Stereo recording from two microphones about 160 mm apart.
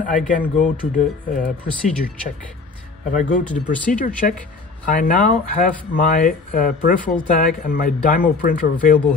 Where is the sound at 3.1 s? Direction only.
50° left (ahead or behind).